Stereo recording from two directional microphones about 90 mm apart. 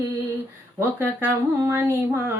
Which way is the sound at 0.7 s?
25° right (ahead or behind).